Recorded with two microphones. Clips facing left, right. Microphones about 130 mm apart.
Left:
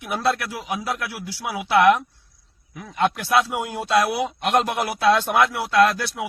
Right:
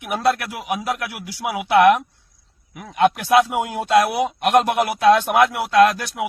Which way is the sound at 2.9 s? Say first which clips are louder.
Right 4 dB; 50° right (ahead or behind).